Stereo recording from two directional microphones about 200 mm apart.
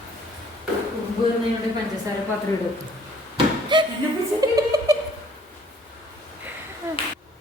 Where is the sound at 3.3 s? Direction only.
25° right (ahead or behind).